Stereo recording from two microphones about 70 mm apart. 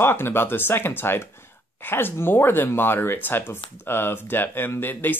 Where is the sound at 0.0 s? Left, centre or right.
Left.